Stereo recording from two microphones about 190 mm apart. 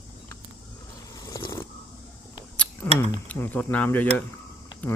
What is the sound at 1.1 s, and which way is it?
Vehicle, 20° left (ahead or behind).